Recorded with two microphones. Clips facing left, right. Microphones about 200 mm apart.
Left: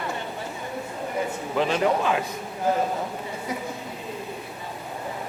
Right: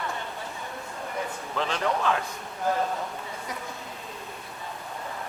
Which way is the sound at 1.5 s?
10° left (ahead or behind).